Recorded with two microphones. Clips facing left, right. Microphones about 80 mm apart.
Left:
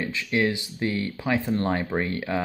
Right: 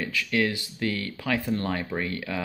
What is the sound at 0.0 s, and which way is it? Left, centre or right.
Speech, left.